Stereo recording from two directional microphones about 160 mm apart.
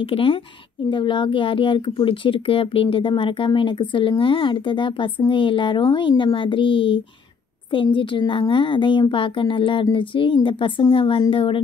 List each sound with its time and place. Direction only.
0.0 s speech: 35° left (ahead or behind)